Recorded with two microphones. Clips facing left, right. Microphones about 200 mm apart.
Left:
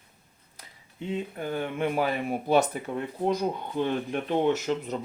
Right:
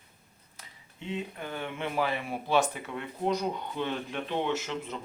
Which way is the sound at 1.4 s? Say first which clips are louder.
Left 6 dB; 40° left (ahead or behind).